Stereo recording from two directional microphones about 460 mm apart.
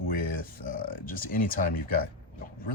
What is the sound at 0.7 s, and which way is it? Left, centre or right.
Speech, centre.